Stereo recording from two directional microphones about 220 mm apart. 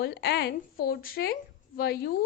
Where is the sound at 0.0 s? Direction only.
45° left (ahead or behind).